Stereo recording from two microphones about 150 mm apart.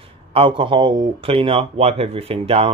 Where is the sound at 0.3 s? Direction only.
35° right (ahead or behind).